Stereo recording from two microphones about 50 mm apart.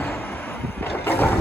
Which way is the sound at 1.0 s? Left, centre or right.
Left.